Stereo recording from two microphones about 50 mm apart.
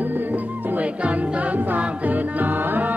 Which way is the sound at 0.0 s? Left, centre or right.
Right.